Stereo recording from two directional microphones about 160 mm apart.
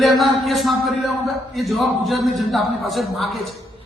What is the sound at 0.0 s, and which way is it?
A man's voice, centre (ahead or behind).